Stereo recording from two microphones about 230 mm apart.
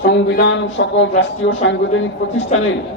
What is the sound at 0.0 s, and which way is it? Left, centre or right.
A man's voice, left.